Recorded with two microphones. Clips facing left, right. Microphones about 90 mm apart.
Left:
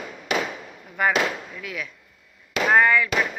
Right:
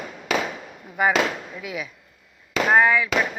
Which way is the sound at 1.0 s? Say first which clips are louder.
Right 1 dB; 5° right (ahead or behind).